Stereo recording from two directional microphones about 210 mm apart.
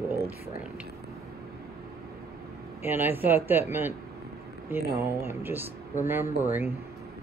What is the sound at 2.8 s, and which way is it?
Speech, 10° right (ahead or behind).